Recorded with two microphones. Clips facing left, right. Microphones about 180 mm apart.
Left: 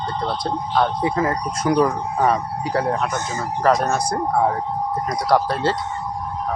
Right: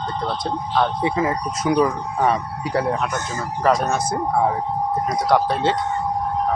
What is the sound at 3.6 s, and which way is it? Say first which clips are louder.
Speech: left 1 dB; 5° right (ahead or behind).